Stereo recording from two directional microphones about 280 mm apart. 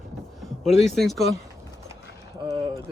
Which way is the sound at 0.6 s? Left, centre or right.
Centre.